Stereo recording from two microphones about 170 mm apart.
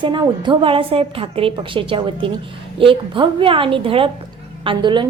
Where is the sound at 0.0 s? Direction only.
30° right (ahead or behind).